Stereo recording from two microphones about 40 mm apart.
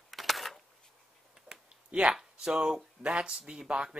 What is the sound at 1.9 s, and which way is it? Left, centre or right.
Speech, right.